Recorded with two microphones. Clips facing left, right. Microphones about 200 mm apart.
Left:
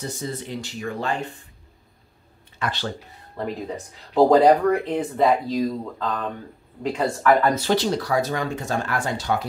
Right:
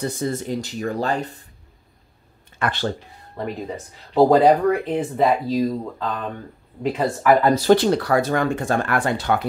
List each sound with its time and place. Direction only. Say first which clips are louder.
0.2 s speech: right 6 dB; 45° right (ahead or behind)
2.6 s speech: right 4 dB; 55° right (ahead or behind)
3.3 s speech: right 1 dB; centre (ahead or behind)
7.4 s speech: right 4 dB; 35° right (ahead or behind)
7.7 s speech: right 5 dB; 55° right (ahead or behind)